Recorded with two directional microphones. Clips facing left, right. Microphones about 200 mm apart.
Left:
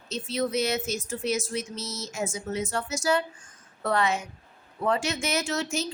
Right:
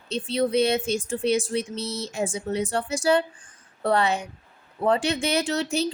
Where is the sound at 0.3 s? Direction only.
30° right (ahead or behind).